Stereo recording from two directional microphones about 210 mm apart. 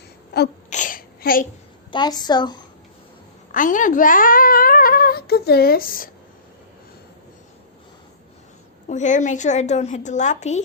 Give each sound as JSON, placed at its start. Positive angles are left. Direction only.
{"t": 0.7, "sound": "a sound", "side_deg": 40}
{"t": 1.9, "sound": "a woman's voice", "side_deg": 20}
{"t": 3.5, "sound": "a child's voice", "side_deg": 40}
{"t": 8.9, "sound": "a child's voice", "side_deg": 35}